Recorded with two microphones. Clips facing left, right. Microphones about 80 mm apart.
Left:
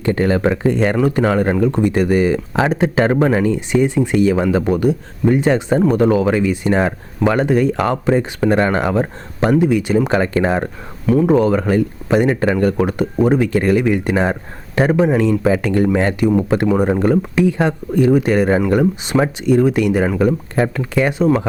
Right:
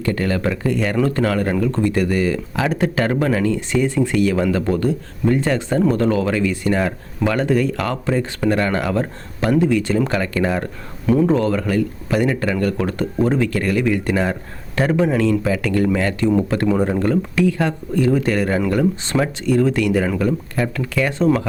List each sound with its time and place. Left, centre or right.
0.0 s speech: left
0.9 s speech: centre
11.3 s speech: centre
16.2 s speech: centre
21.2 s speech: centre